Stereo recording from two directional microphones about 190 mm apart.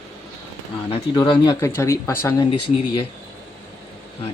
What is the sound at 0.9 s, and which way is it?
Speech, 30° left (ahead or behind).